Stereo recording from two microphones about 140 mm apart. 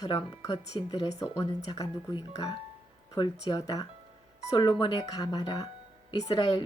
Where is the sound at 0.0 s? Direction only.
30° left (ahead or behind).